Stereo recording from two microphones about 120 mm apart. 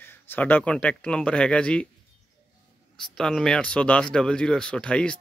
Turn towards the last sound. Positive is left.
turn(degrees=10)  # may be behind; listen again after turning